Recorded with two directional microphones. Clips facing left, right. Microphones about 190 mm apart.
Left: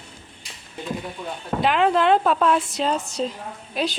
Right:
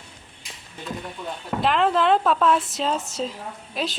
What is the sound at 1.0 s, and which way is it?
Speech, centre (ahead or behind).